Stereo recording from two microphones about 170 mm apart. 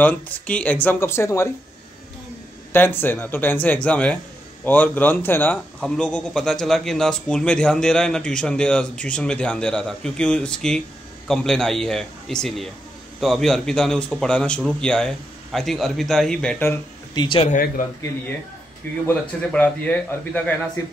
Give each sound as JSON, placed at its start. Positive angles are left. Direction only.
{"t": 0.0, "sound": "a man's voice", "side_deg": 10}
{"t": 2.7, "sound": "a man's voice", "side_deg": 10}
{"t": 17.1, "sound": "speech", "side_deg": 25}
{"t": 17.5, "sound": "a man's voice", "side_deg": 50}
{"t": 19.0, "sound": "a man's voice", "side_deg": 10}